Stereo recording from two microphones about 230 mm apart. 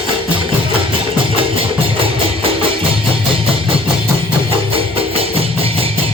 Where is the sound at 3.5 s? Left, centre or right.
Right.